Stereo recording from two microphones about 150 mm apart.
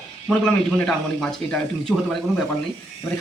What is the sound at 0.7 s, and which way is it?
Speech, 5° left (ahead or behind).